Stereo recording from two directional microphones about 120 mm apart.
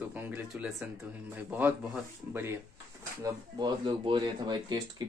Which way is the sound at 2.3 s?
15° right (ahead or behind).